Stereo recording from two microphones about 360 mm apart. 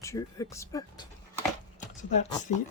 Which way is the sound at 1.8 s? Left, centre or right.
Left.